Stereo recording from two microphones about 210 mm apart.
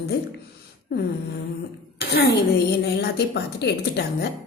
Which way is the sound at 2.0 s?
50° left (ahead or behind).